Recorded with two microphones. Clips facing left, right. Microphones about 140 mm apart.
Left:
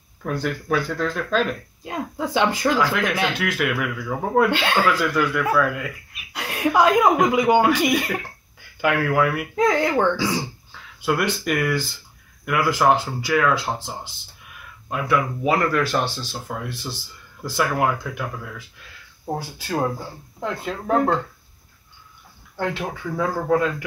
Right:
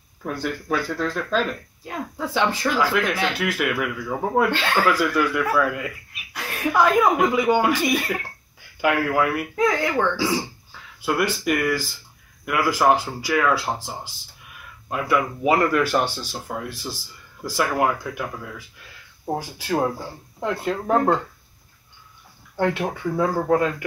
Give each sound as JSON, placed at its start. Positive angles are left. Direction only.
{"t": 0.2, "sound": "speech", "side_deg": -5}
{"t": 1.9, "sound": "speech", "side_deg": 15}
{"t": 3.3, "sound": "speech", "side_deg": -5}
{"t": 4.5, "sound": "speech", "side_deg": 15}
{"t": 4.8, "sound": "speech", "side_deg": -10}
{"t": 6.3, "sound": "speech", "side_deg": 15}
{"t": 8.8, "sound": "speech", "side_deg": -5}
{"t": 9.6, "sound": "speech", "side_deg": 20}
{"t": 10.1, "sound": "speech", "side_deg": -5}
{"t": 14.9, "sound": "speech", "side_deg": 0}
{"t": 19.2, "sound": "speech", "side_deg": -15}
{"t": 22.6, "sound": "speech", "side_deg": -20}
{"t": 22.8, "sound": "speech", "side_deg": -5}